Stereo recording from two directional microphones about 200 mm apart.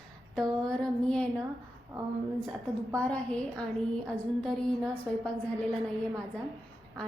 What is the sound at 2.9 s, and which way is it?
A woman's voice, 5° left (ahead or behind).